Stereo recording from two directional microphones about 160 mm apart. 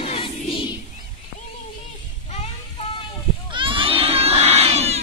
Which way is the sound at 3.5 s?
30° right (ahead or behind).